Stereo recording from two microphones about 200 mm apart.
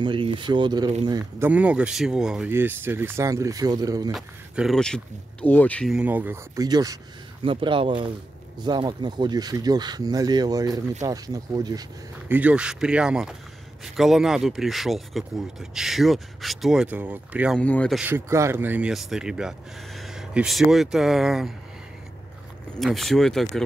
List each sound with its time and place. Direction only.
0.0 s speech: 25° right (ahead or behind)
1.5 s speech: 5° right (ahead or behind)
4.1 s speech: centre (ahead or behind)
5.9 s speech: 10° right (ahead or behind)
12.3 s speech: 5° right (ahead or behind)
17.6 s speech: 5° left (ahead or behind)
18.0 s speech: 10° right (ahead or behind)
22.8 s speech: centre (ahead or behind)